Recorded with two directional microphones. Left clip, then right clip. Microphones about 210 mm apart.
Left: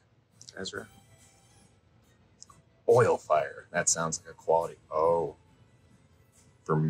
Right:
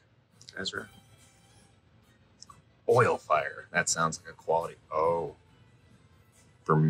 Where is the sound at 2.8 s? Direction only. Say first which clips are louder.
Left 1 dB; 20° left (ahead or behind).